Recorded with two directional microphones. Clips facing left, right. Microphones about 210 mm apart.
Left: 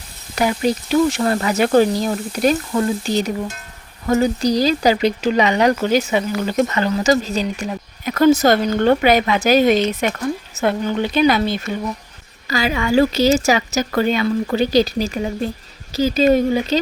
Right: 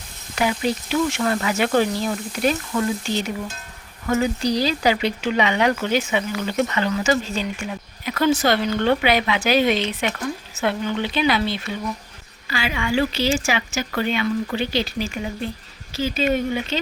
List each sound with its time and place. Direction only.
0.3 s speech: 40° left (ahead or behind)